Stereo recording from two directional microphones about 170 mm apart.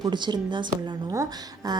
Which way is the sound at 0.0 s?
25° right (ahead or behind).